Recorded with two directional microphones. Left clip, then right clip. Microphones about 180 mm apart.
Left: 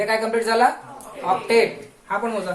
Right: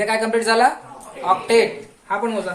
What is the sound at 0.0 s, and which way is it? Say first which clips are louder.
Speech: right 2 dB; 40° right (ahead or behind).